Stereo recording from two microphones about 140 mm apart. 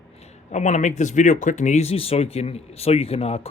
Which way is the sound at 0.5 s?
60° left (ahead or behind).